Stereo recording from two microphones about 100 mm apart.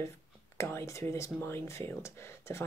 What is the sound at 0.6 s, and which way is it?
Speech, 30° left (ahead or behind).